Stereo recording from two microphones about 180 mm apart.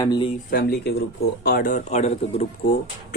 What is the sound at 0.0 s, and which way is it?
Speech, 20° left (ahead or behind).